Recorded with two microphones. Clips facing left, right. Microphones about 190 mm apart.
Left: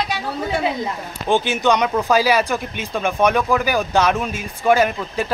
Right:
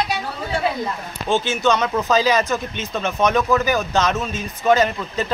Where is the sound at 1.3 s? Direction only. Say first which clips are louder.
Left 1 dB; 15° left (ahead or behind).